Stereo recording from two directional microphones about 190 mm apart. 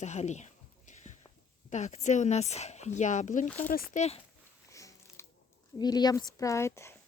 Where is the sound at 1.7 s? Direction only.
40° left (ahead or behind).